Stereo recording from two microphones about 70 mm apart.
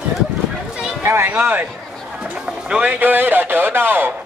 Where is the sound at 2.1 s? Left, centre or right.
Centre.